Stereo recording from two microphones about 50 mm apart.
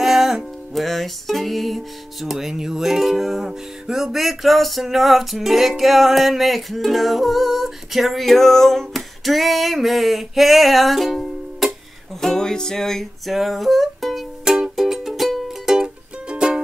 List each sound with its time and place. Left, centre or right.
0.0 s music: centre
13.3 s music: centre
14.4 s music: centre
14.8 s music: centre